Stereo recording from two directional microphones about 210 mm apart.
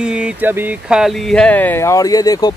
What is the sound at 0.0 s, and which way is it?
Speech, 5° right (ahead or behind).